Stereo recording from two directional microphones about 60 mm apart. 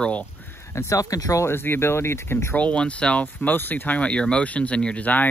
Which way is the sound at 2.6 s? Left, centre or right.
Left.